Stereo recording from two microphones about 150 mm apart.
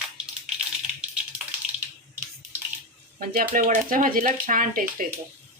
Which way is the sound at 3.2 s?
70° right (ahead or behind).